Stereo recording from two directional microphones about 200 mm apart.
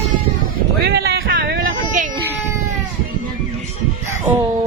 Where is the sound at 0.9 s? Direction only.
55° right (ahead or behind).